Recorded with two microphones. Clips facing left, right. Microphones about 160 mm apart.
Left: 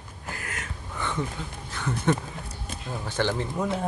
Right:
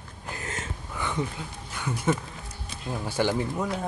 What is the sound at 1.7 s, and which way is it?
Speech, 10° right (ahead or behind).